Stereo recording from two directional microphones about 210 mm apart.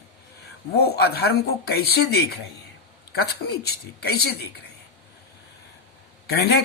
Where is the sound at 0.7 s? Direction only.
50° left (ahead or behind).